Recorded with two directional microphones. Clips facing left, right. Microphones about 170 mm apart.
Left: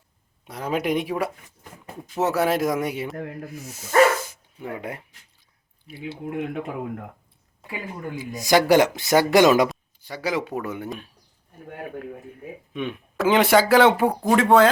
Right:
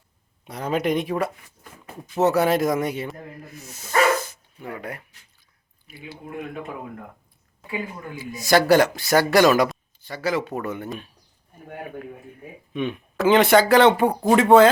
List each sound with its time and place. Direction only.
0.4 s speech: 5° left (ahead or behind)
4.6 s speech: 20° left (ahead or behind)
6.3 s speech: 90° left
8.4 s speech: 15° left (ahead or behind)
12.7 s speech: centre (ahead or behind)